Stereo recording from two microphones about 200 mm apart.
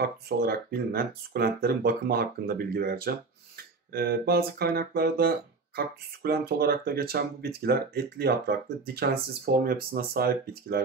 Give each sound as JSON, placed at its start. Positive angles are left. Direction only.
{"t": 0.0, "sound": "speech", "side_deg": -50}